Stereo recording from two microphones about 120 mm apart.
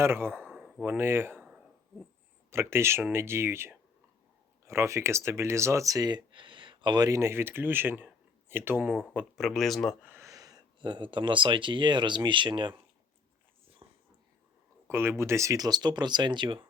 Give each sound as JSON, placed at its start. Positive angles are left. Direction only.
{"t": 0.0, "sound": "speech", "side_deg": -20}
{"t": 0.5, "sound": "a sound", "side_deg": 0}
{"t": 0.9, "sound": "speech", "side_deg": -20}
{"t": 2.5, "sound": "speech", "side_deg": -20}
{"t": 9.3, "sound": "speech", "side_deg": 0}
{"t": 10.0, "sound": "a sound", "side_deg": -15}
{"t": 10.2, "sound": "speech", "side_deg": -30}
{"t": 13.8, "sound": "dog", "side_deg": -25}
{"t": 14.8, "sound": "speech", "side_deg": -20}